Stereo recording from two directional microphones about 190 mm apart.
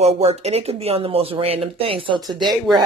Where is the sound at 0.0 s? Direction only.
35° right (ahead or behind).